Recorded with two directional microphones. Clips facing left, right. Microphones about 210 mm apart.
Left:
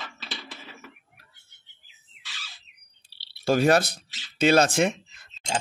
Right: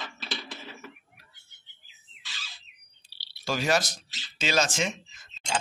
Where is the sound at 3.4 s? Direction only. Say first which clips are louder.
Left 7 dB; 55° left (ahead or behind).